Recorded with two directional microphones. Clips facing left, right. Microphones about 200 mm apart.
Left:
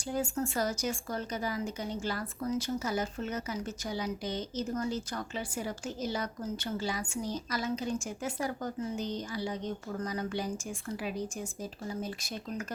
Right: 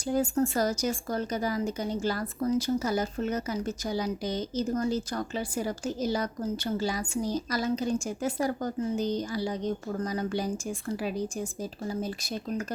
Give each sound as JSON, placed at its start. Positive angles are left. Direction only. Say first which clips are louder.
{"t": 0.1, "sound": "a woman's voice", "louder": "right 6 dB", "side_deg": -40}